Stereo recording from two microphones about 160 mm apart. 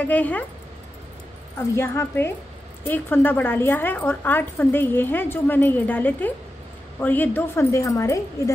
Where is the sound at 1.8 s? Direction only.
15° left (ahead or behind).